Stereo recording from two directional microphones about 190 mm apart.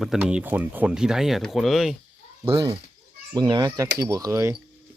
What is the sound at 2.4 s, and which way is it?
Speech, 20° right (ahead or behind).